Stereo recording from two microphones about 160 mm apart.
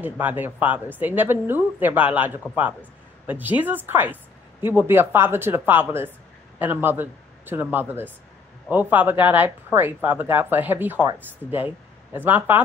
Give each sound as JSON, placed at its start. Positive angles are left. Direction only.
{"t": 0.0, "sound": "speech", "side_deg": -10}